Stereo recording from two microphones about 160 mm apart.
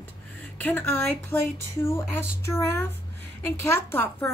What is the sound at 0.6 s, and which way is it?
A woman's voice, 10° left (ahead or behind).